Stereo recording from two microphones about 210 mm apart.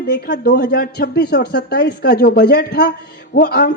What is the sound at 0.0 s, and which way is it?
A man's voice, 45° left (ahead or behind).